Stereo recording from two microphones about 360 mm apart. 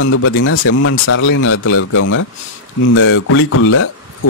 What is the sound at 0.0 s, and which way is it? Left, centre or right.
Speech, left.